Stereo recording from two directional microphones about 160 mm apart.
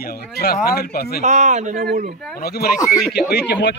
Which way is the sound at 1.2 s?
50° right (ahead or behind).